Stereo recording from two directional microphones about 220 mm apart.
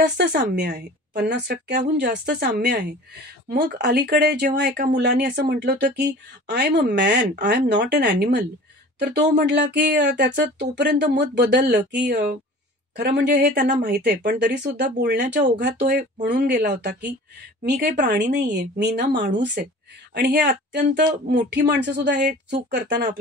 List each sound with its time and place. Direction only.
0.4 s speech: 50° right (ahead or behind)
15.5 s speech: 35° right (ahead or behind)
17.6 s speech: 45° right (ahead or behind)